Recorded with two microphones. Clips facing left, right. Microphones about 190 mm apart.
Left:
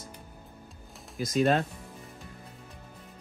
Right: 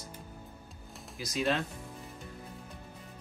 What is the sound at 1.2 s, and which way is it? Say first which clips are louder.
Speech: left 6 dB; 50° left (ahead or behind).